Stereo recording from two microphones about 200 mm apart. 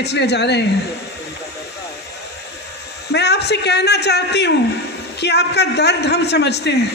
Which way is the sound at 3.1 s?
55° left (ahead or behind).